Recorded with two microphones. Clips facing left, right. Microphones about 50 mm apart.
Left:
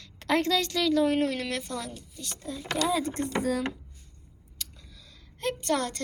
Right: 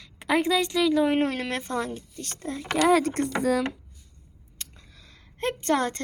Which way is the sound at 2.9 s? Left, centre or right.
Right.